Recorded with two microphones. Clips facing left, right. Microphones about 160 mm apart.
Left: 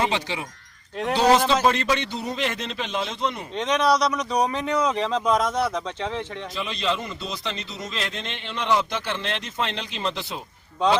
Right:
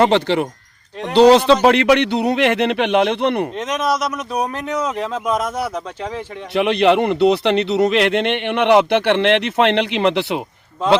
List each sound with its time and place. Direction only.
0.0 s a man's voice: 65° right (ahead or behind)
3.5 s speech: 5° right (ahead or behind)
6.5 s a man's voice: 65° right (ahead or behind)